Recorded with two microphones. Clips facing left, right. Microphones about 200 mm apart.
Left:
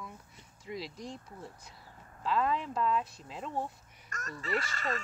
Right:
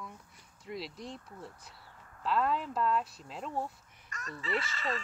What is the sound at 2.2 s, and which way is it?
Speech, centre (ahead or behind).